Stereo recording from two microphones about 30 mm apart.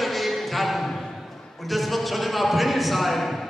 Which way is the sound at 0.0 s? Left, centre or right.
Centre.